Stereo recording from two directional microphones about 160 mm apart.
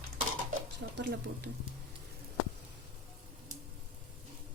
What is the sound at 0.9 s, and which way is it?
Speech, 90° right.